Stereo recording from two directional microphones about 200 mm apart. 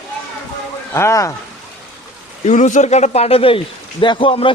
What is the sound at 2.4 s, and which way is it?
Speech, 35° left (ahead or behind).